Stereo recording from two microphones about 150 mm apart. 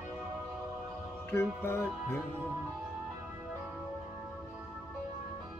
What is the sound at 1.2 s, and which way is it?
Music, 15° left (ahead or behind).